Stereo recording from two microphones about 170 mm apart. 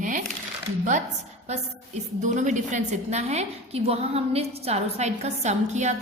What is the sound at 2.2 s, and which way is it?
A woman's voice, 45° right (ahead or behind).